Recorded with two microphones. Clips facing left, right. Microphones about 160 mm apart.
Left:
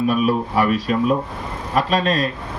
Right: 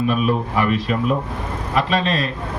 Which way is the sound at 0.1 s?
40° left (ahead or behind).